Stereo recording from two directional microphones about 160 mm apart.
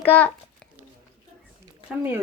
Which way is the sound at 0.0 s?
10° left (ahead or behind).